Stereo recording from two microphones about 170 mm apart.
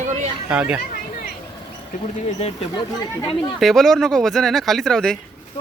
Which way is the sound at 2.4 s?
35° left (ahead or behind).